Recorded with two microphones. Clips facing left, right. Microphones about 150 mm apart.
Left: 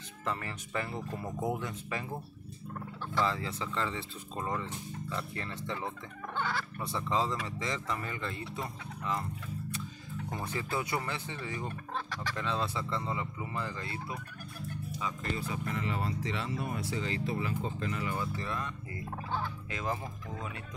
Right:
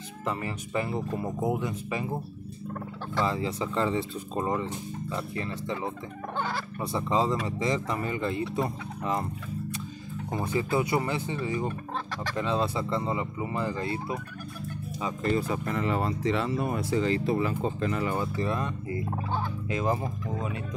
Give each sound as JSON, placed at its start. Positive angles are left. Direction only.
{"t": 0.2, "sound": "speech", "side_deg": -15}
{"t": 3.3, "sound": "speech", "side_deg": -20}
{"t": 6.3, "sound": "speech", "side_deg": -40}
{"t": 6.8, "sound": "speech", "side_deg": -15}
{"t": 10.3, "sound": "speech", "side_deg": -15}
{"t": 15.3, "sound": "speech", "side_deg": -45}
{"t": 16.4, "sound": "speech", "side_deg": -65}
{"t": 18.4, "sound": "speech", "side_deg": -25}